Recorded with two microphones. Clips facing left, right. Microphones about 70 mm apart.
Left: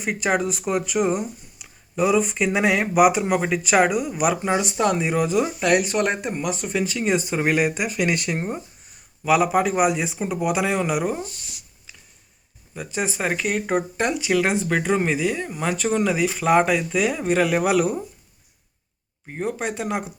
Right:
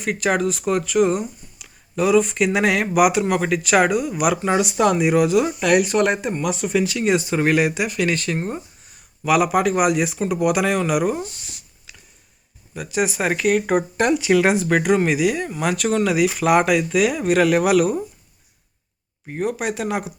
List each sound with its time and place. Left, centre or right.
0.0 s speech: centre
8.0 s speech: centre
9.2 s speech: centre
12.7 s speech: centre
13.7 s speech: centre
19.3 s speech: centre